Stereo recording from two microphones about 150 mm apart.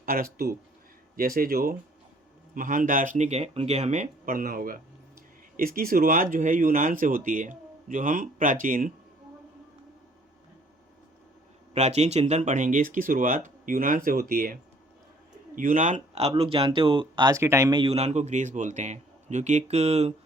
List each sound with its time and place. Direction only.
0.0 s speech: 70° right (ahead or behind)
2.6 s speech: 60° right (ahead or behind)
11.7 s speech: 45° right (ahead or behind); by 14.6 s 75° right (ahead or behind)
15.5 s speech: 60° right (ahead or behind); by 17.7 s 20° right (ahead or behind)
17.7 s a man's voice: 40° right (ahead or behind)